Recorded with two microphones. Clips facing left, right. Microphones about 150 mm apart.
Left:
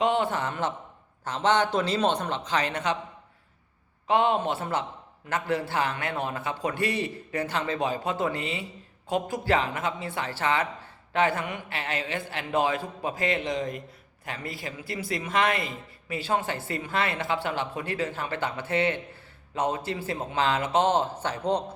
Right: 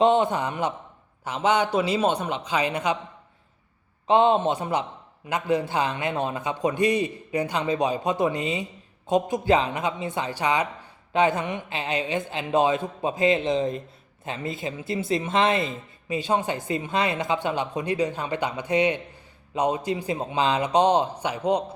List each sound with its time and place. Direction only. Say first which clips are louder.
0.0 s a man's voice: right 5 dB; 20° right (ahead or behind)
4.0 s a woman's voice: right 4 dB; 25° right (ahead or behind)